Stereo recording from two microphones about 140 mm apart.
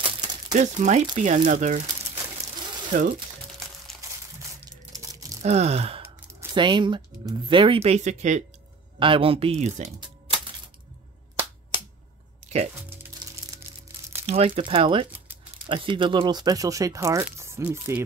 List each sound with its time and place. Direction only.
0.0 s crumpling: 30° right (ahead or behind)
0.5 s speech: 55° right (ahead or behind)
2.9 s speech: 65° right (ahead or behind)
4.4 s crumpling: 25° right (ahead or behind)
5.4 s gasp: 50° right (ahead or behind)
6.5 s speech: 35° right (ahead or behind); by 8.5 s 60° right (ahead or behind)
9.0 s speech: 40° right (ahead or behind)
9.9 s music: 35° right (ahead or behind)
14.2 s speech: 50° right (ahead or behind)
15.0 s a sound: 10° right (ahead or behind)
15.6 s speech: 35° right (ahead or behind); by 18.0 s 15° right (ahead or behind)